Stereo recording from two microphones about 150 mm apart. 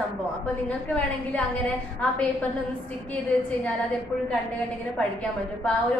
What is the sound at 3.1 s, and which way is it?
Speech, 10° left (ahead or behind).